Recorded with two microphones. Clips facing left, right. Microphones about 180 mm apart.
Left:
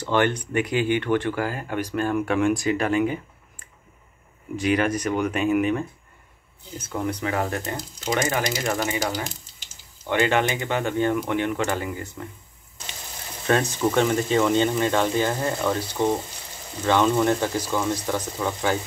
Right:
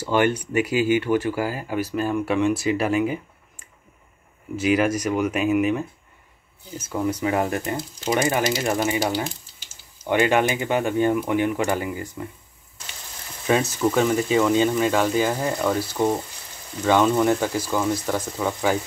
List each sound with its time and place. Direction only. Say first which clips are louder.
0.0 s speech: right 1 dB; 10° right (ahead or behind)
7.2 s speech: right 3 dB; 15° right (ahead or behind)
10.0 s speech: right 2 dB; 15° right (ahead or behind)
13.5 s speech: right 1 dB; 10° right (ahead or behind)